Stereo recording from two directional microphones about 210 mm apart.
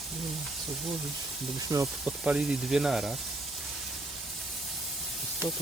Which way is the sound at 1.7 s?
15° right (ahead or behind).